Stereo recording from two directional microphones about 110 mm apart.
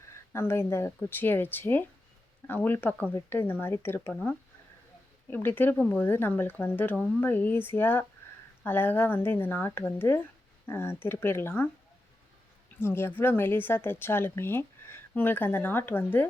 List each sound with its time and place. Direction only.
0.3 s a woman's voice: 25° left (ahead or behind)
12.8 s a woman's voice: 20° left (ahead or behind)